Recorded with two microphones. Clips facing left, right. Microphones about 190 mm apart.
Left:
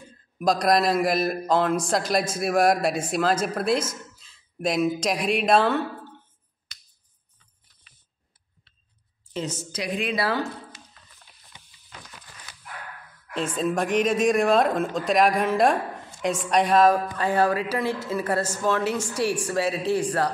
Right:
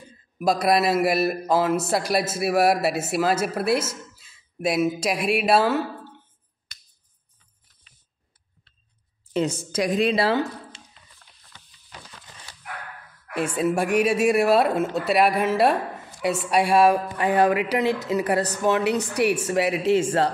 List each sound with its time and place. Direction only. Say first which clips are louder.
0.4 s a man's voice: right 1 dB; 5° right (ahead or behind)
9.3 s speech: right 7 dB; 55° right (ahead or behind); by 10.8 s 25° right (ahead or behind)
11.5 s a sound: even; 10° left (ahead or behind)
13.3 s a woman's voice: right 2 dB; 10° right (ahead or behind)